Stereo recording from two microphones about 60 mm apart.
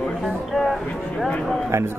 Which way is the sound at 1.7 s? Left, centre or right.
Right.